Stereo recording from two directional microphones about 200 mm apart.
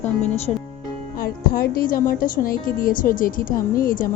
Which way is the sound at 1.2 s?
50° left (ahead or behind).